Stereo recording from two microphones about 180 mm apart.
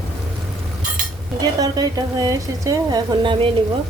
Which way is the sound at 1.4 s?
20° right (ahead or behind).